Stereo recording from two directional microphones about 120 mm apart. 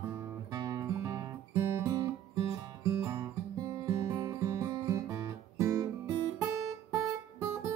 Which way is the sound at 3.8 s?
30° right (ahead or behind).